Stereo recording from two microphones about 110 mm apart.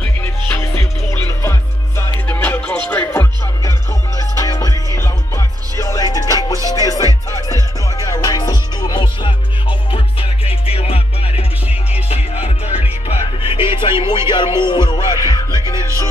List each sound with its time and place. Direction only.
0.0 s music: 20° left (ahead or behind)
4.2 s music: 30° left (ahead or behind); by 12.9 s 65° left (ahead or behind)
13.4 s music: 50° left (ahead or behind)